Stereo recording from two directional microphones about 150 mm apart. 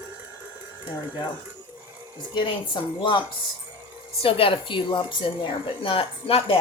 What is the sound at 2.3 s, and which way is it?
A woman's voice, 30° left (ahead or behind).